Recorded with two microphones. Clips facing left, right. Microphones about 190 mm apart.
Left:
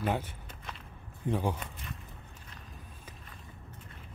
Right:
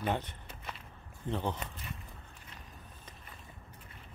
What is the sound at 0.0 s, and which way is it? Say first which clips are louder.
Speech: left 2 dB; 5° left (ahead or behind).